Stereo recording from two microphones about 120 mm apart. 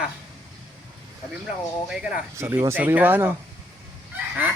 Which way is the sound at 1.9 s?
5° right (ahead or behind).